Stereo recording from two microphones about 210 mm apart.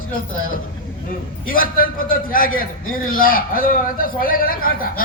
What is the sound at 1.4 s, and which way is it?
A man's voice, 40° left (ahead or behind).